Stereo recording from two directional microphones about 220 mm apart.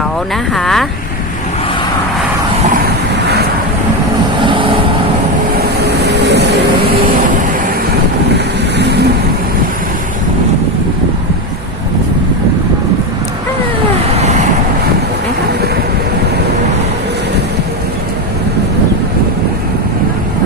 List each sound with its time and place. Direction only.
0.5 s speech: centre (ahead or behind)
4.4 s vehicle: 25° right (ahead or behind)
5.5 s vehicle: 45° right (ahead or behind)
8.8 s vehicle: 50° right (ahead or behind)
14.1 s vehicle: 30° right (ahead or behind)